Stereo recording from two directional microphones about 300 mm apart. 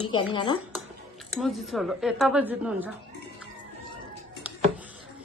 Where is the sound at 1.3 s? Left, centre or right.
Centre.